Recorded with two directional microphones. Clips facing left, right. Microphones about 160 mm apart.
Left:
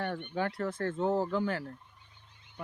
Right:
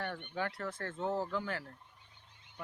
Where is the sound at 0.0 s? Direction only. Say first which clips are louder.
Left 5 dB; 35° left (ahead or behind).